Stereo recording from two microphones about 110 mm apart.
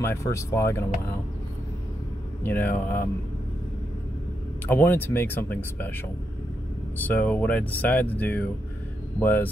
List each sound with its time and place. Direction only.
0.0 s speech: 25° left (ahead or behind)
2.4 s speech: 15° left (ahead or behind)
4.6 s speech: 20° left (ahead or behind)
7.1 s speech: 15° left (ahead or behind)